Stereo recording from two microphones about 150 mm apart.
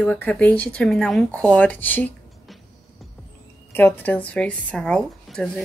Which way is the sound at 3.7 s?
10° left (ahead or behind).